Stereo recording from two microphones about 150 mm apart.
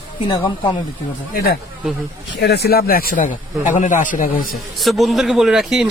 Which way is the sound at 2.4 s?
90° left.